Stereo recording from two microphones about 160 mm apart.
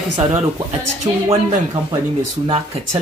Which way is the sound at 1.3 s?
25° right (ahead or behind).